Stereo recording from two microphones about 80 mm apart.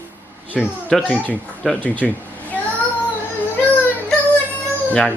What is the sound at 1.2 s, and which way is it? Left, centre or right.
Speech, centre.